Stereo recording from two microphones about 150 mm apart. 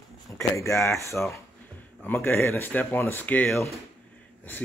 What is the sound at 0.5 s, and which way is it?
A man's voice, 20° left (ahead or behind).